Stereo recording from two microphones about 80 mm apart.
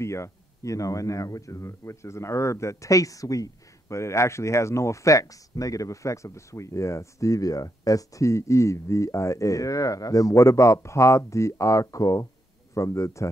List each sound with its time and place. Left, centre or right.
0.0 s speech: left